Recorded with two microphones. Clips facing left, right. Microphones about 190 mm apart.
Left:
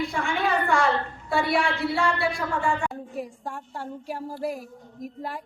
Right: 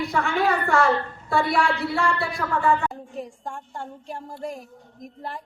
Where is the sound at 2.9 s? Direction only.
5° left (ahead or behind).